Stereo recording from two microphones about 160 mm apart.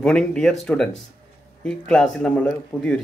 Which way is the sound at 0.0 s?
5° left (ahead or behind).